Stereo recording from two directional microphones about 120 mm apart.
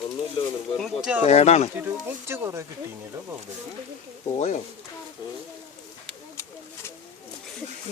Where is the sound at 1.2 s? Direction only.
65° left (ahead or behind).